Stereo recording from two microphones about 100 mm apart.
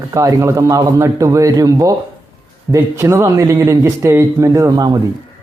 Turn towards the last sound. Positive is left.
turn(degrees=-35)  # may be behind; listen again after turning